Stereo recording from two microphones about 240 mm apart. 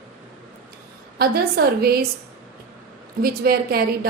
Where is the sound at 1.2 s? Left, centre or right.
Right.